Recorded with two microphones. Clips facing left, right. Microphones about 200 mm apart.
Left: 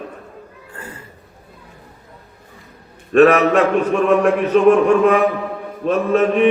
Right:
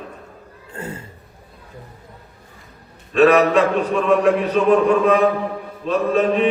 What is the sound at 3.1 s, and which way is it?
Mantra, 55° left (ahead or behind).